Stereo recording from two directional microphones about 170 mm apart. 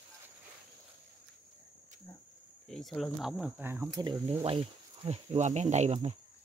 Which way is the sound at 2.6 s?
Centre (ahead or behind).